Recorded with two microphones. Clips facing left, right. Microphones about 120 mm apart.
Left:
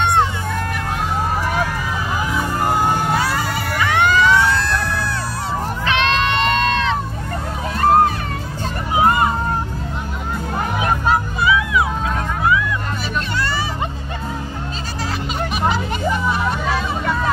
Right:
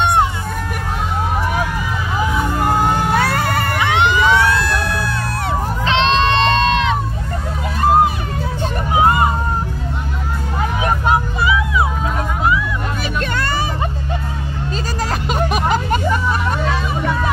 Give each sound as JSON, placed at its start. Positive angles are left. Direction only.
{"t": 3.2, "sound": "cat", "side_deg": -60}
{"t": 3.8, "sound": "a sound", "side_deg": -20}
{"t": 5.9, "sound": "crowd", "side_deg": -25}
{"t": 8.9, "sound": "hubbub", "side_deg": -20}
{"t": 10.8, "sound": "music", "side_deg": -25}
{"t": 13.4, "sound": "music", "side_deg": -50}
{"t": 15.2, "sound": "music", "side_deg": -45}